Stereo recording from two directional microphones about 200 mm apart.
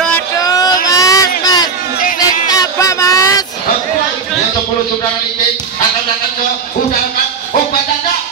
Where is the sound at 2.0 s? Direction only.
40° left (ahead or behind).